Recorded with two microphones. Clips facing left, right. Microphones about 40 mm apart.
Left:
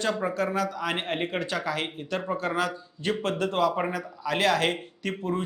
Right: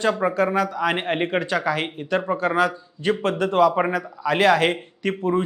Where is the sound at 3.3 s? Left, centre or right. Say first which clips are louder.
Right 8 dB; centre.